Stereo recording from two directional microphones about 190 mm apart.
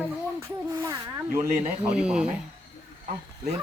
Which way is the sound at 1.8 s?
5° right (ahead or behind).